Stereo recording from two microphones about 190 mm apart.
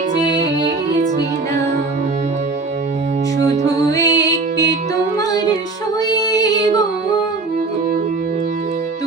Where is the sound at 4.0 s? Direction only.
20° left (ahead or behind).